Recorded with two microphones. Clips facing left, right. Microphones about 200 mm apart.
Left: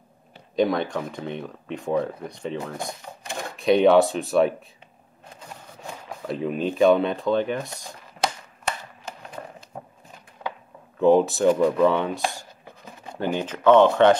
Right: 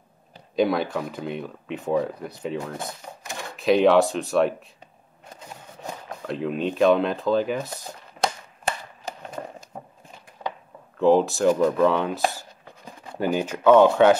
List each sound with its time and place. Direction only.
0.6 s speech: 5° right (ahead or behind)
3.5 s speech: centre (ahead or behind)
6.2 s speech: centre (ahead or behind)
9.0 s a sound: 45° right (ahead or behind)
11.0 s speech: centre (ahead or behind)